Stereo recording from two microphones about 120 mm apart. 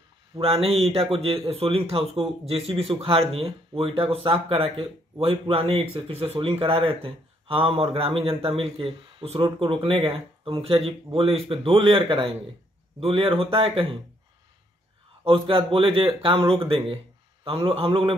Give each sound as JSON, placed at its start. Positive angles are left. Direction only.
{"t": 0.4, "sound": "speech", "side_deg": -55}
{"t": 15.2, "sound": "speech", "side_deg": -45}